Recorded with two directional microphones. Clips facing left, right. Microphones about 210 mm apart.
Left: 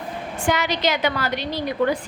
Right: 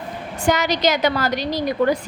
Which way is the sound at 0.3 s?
40° right (ahead or behind).